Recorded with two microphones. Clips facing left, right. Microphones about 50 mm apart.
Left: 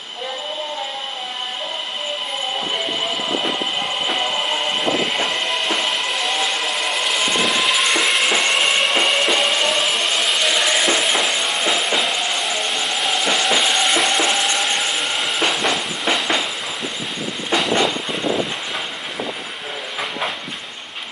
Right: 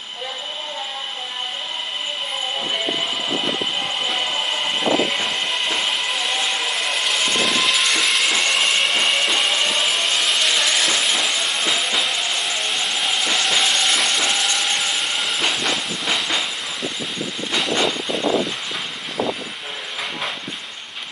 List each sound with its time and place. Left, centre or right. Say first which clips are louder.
5.1 s music: left 2 dB; centre
7.2 s vehicle: left 1 dB; centre
8.0 s music: left 2 dB; centre
8.3 s music: left 2 dB; centre
8.6 s a sound: left 2 dB; centre
11.6 s music: left 3 dB; centre
12.0 s music: left 2 dB; centre
14.1 s frying: left 3 dB; centre
14.7 s train: left 1 dB; centre